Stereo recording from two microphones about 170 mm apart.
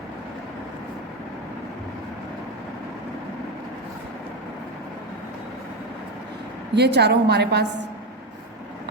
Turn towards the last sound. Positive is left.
turn(degrees=-80)